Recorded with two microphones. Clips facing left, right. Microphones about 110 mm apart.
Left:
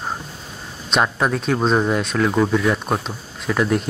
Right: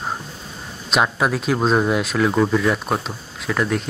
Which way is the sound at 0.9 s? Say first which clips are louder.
Even; 5° right (ahead or behind).